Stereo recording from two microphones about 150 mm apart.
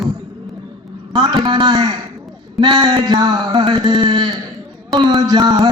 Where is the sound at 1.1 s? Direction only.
30° right (ahead or behind).